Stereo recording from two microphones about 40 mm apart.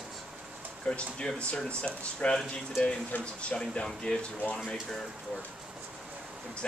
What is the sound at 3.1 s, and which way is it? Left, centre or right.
Speech, left.